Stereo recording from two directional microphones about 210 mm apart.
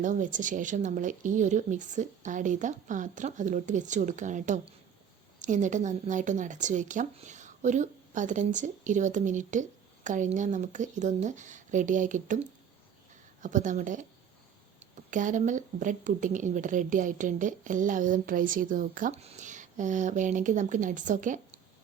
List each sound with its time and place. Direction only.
0.0 s speech: 40° right (ahead or behind)
13.4 s speech: 35° right (ahead or behind)
15.1 s speech: 35° right (ahead or behind)